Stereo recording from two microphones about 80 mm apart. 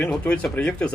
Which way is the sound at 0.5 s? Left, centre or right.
Centre.